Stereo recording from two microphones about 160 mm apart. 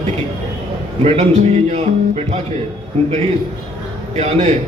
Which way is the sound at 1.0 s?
40° right (ahead or behind).